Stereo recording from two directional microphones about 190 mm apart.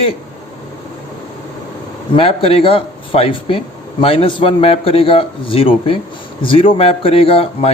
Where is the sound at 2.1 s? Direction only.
30° left (ahead or behind).